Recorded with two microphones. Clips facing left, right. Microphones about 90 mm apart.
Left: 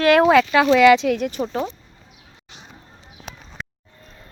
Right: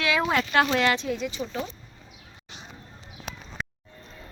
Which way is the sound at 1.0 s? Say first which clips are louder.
Left 9 dB; 80° left.